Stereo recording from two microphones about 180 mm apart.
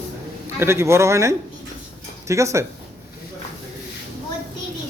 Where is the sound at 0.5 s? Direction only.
15° right (ahead or behind).